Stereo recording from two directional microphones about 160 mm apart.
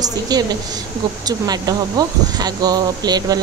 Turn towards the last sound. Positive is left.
turn(degrees=-25)  # may be behind; listen again after turning